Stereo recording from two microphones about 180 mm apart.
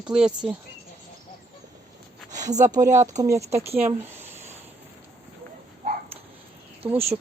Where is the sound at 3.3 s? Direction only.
35° right (ahead or behind).